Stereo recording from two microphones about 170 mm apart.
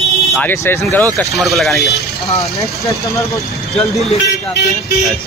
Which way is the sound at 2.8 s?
20° left (ahead or behind).